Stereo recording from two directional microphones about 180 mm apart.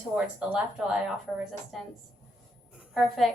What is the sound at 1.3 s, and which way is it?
A woman's voice, 5° left (ahead or behind).